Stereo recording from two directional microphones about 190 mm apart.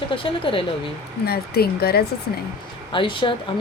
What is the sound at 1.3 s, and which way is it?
Speech, 55° left (ahead or behind).